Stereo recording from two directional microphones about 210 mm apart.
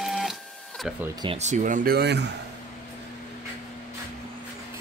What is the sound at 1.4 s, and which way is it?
Speech, 35° right (ahead or behind).